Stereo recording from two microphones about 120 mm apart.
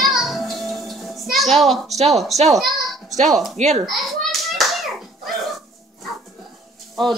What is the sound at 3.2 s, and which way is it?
Speech, centre (ahead or behind).